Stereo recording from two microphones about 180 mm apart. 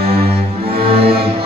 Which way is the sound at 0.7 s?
30° right (ahead or behind).